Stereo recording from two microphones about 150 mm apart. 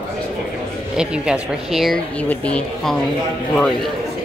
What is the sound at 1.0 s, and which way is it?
Speech, 5° right (ahead or behind).